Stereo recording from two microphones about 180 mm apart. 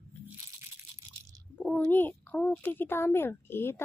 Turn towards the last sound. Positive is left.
turn(degrees=10)  # may be behind; listen again after turning